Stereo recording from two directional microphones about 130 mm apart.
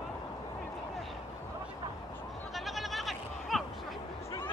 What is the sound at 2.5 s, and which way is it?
Goat, centre (ahead or behind).